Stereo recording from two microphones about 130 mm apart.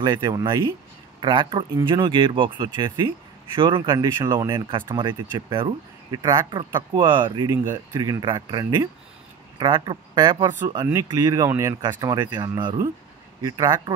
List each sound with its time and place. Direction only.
0.0 s speech: 30° right (ahead or behind)
4.2 s speech: 25° right (ahead or behind)
4.5 s speech: 35° right (ahead or behind)